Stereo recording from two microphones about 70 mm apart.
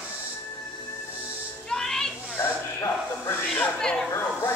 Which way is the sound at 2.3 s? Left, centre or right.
Left.